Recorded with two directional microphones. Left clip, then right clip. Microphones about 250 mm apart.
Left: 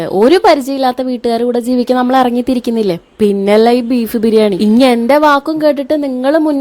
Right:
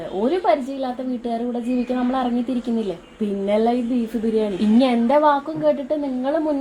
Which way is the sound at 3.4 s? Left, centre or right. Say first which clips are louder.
Left 9 dB; left.